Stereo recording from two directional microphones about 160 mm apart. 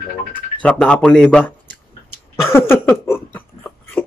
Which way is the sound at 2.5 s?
15° left (ahead or behind).